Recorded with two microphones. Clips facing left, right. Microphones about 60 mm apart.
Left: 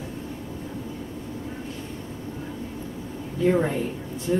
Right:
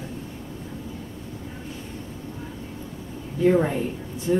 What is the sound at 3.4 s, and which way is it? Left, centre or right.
Speech, centre.